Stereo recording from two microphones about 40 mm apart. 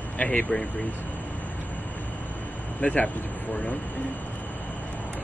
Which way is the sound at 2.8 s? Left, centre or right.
Left.